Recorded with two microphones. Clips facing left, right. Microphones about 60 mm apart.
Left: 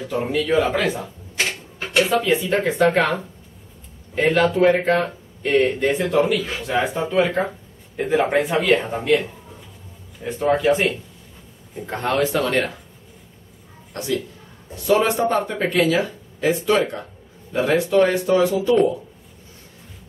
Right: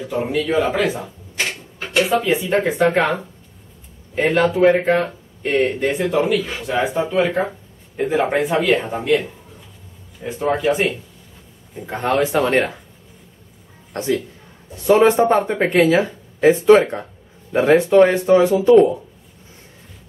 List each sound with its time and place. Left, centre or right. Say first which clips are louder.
0.0 s speech: right 1 dB; centre
6.8 s speech: right 2 dB; centre
13.9 s speech: right 4 dB; right